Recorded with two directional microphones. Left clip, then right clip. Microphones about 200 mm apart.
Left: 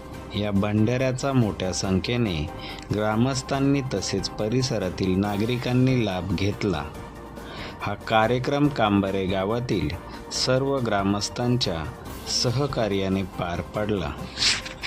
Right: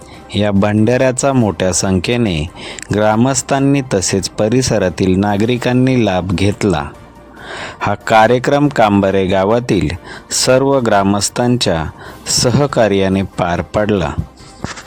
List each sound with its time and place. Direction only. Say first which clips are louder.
0.3 s speech: right 12 dB; 50° right (ahead or behind)